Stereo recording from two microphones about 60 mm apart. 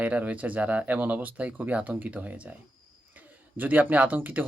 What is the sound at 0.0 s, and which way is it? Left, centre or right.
Speech, right.